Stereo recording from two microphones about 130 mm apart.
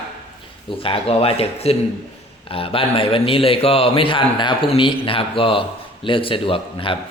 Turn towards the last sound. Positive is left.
turn(degrees=45)  # may be behind; listen again after turning